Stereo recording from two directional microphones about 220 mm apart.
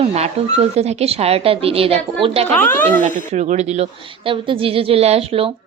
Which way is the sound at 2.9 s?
35° right (ahead or behind).